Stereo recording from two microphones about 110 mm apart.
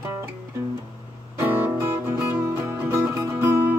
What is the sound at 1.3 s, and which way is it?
Music, 25° right (ahead or behind).